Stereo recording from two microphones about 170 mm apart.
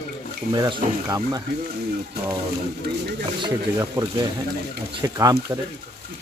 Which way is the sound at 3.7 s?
20° right (ahead or behind).